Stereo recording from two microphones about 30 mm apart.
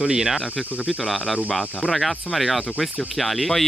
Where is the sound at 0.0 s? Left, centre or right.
Centre.